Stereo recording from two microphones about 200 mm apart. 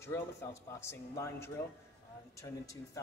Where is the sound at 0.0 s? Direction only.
15° left (ahead or behind).